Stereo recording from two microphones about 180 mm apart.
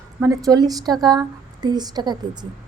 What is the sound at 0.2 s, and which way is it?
A woman's voice, 20° right (ahead or behind).